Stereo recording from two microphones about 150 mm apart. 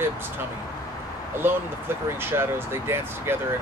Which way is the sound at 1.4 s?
15° right (ahead or behind).